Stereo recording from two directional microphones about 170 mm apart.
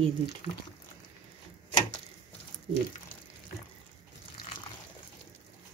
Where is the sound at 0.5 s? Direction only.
25° left (ahead or behind).